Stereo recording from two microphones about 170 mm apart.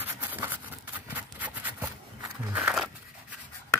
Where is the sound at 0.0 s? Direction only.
10° right (ahead or behind).